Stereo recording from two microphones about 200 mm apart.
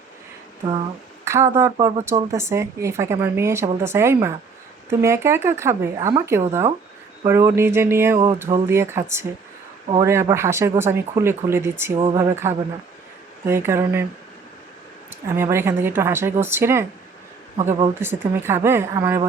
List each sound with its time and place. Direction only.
1.2 s a woman's voice: 15° right (ahead or behind)
11.9 s a woman's voice: 25° right (ahead or behind)
15.4 s a woman's voice: 10° right (ahead or behind)